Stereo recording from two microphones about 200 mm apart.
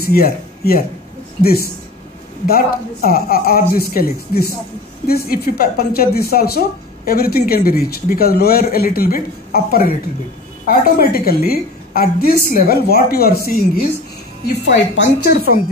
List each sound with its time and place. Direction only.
0.0 s a woman's voice: 50° left (ahead or behind)